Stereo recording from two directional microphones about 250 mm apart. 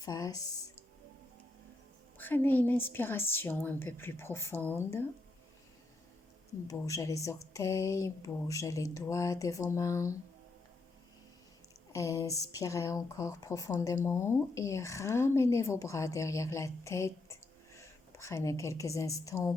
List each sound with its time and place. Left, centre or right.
0.0 s speech: centre
2.1 s speech: centre
6.7 s speech: centre
11.9 s a woman's voice: centre